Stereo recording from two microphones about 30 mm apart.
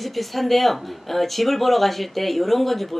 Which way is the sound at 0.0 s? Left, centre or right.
Centre.